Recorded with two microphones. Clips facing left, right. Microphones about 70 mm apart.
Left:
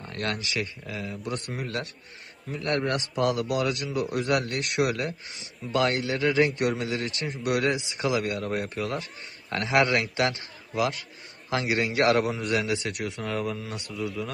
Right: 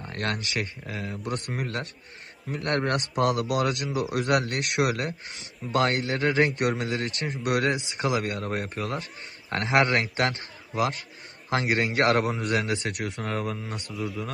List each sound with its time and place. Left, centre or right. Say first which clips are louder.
0.2 s a man's voice: even; right
13.9 s a man's voice: left 1 dB; centre